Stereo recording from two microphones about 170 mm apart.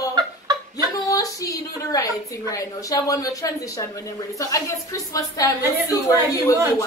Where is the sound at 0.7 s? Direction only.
20° left (ahead or behind).